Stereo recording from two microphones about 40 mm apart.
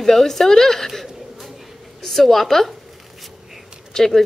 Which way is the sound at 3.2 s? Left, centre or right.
Centre.